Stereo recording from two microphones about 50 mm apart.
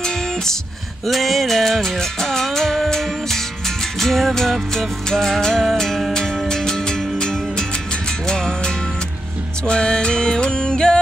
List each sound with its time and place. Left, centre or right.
0.0 s music: centre
1.0 s music: centre